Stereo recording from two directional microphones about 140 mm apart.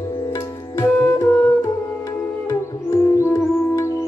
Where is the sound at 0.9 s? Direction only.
15° left (ahead or behind).